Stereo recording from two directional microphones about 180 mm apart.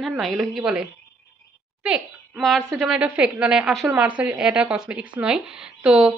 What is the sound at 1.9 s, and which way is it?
A woman's voice, 5° right (ahead or behind).